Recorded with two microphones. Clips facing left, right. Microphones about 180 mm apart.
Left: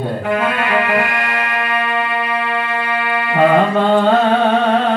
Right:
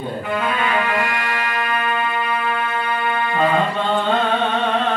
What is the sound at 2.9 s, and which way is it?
Music, 70° left (ahead or behind).